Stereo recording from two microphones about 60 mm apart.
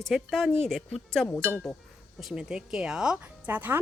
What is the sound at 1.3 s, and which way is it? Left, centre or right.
Speech, left.